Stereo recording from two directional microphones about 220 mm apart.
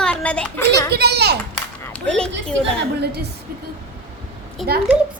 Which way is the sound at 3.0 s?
50° right (ahead or behind).